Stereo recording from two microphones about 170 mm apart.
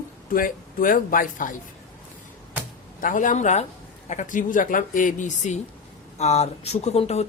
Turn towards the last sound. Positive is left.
turn(degrees=40)  # may be behind; listen again after turning